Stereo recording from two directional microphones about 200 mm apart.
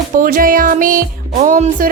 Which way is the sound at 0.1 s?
45° right (ahead or behind).